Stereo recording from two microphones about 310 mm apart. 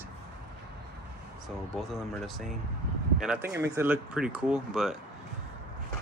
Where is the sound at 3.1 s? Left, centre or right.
Centre.